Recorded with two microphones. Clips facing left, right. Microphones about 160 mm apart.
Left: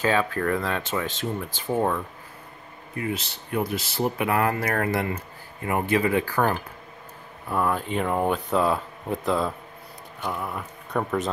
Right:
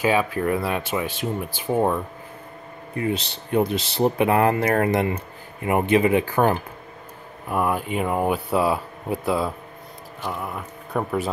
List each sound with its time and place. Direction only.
0.0 s speech: 10° right (ahead or behind)
3.0 s speech: 30° right (ahead or behind); by 11.1 s centre (ahead or behind)